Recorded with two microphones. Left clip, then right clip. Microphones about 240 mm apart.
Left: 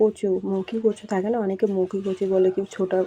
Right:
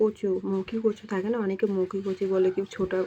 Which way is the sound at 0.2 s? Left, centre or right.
Left.